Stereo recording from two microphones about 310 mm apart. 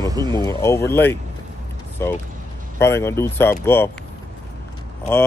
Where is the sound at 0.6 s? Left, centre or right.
Centre.